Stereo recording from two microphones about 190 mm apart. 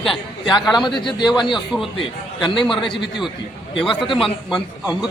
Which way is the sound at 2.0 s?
25° left (ahead or behind).